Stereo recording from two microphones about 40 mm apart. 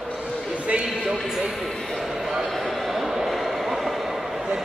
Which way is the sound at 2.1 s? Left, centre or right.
Centre.